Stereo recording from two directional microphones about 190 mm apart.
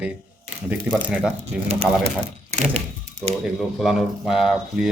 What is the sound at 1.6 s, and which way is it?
Speech, 35° right (ahead or behind).